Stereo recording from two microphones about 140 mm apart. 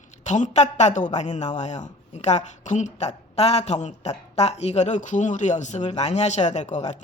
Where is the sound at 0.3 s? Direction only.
60° left (ahead or behind).